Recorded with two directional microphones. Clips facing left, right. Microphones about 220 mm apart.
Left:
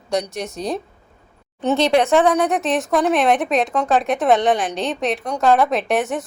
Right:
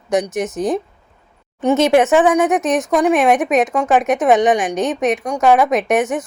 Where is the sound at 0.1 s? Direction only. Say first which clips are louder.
Right 5 dB; 20° right (ahead or behind).